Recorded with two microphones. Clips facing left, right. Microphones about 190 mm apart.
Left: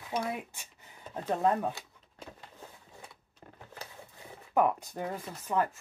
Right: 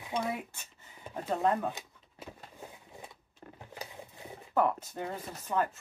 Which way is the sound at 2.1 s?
15° right (ahead or behind).